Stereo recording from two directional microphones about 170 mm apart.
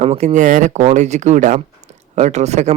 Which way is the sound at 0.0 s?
40° right (ahead or behind).